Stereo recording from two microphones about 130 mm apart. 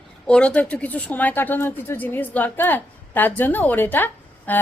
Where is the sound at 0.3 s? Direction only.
10° left (ahead or behind).